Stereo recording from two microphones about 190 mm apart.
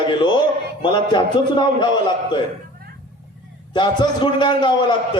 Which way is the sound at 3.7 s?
25° left (ahead or behind).